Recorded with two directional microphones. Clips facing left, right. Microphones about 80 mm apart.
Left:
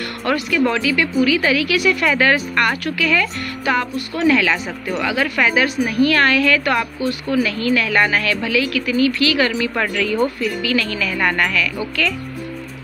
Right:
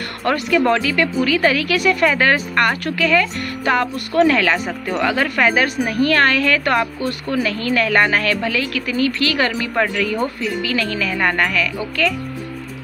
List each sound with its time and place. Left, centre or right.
0.2 s speech: right
3.9 s speech: right